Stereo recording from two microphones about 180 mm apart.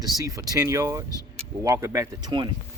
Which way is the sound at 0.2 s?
20° right (ahead or behind).